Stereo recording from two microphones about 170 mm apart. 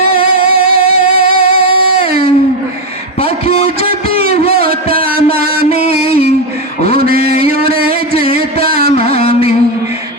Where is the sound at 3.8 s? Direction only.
60° right (ahead or behind).